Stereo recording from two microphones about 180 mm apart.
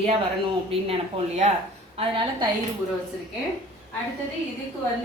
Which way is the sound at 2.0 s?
30° right (ahead or behind).